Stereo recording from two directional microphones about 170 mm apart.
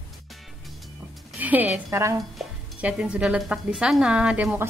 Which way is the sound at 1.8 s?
15° right (ahead or behind).